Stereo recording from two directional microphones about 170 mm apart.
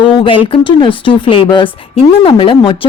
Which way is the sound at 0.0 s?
30° left (ahead or behind).